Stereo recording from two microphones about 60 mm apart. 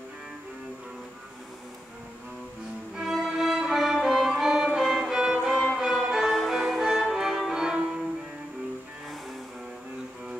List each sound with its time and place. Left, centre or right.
3.0 s music: centre